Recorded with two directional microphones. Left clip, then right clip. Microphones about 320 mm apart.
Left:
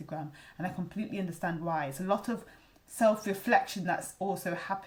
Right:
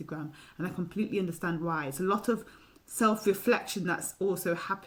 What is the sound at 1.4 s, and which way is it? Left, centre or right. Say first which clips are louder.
Speech: right 1 dB; left.